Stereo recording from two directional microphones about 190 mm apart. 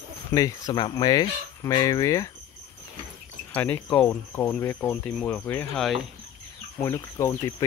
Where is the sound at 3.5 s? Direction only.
10° left (ahead or behind).